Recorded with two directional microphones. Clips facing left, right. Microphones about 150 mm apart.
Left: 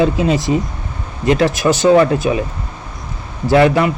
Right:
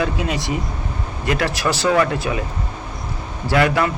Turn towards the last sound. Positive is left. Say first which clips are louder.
# left 6 dB
turn(degrees=25)  # may be behind; listen again after turning